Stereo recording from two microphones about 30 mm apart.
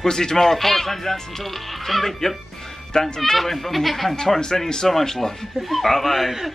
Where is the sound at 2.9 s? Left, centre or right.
Left.